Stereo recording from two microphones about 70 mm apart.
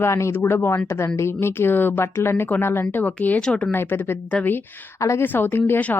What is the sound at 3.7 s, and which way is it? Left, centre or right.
Speech, left.